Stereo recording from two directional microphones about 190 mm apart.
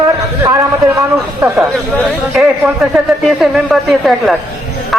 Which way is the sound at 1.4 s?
15° right (ahead or behind).